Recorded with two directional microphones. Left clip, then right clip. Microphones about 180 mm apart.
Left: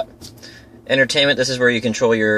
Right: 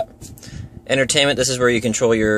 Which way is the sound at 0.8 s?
30° right (ahead or behind).